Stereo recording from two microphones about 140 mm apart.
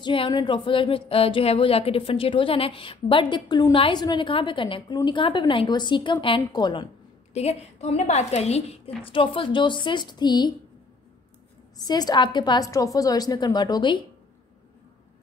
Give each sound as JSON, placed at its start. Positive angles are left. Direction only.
{"t": 0.0, "sound": "speech", "side_deg": 35}
{"t": 7.3, "sound": "speech", "side_deg": 50}
{"t": 11.8, "sound": "a woman's voice", "side_deg": 30}